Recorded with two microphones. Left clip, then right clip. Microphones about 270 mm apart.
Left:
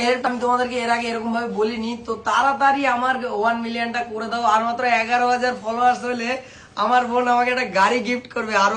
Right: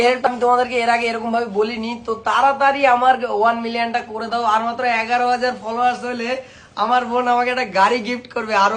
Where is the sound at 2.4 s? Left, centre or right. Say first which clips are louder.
Right 3 dB; right.